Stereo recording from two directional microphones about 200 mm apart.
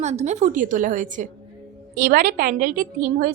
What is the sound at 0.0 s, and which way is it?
A woman's voice, 35° right (ahead or behind).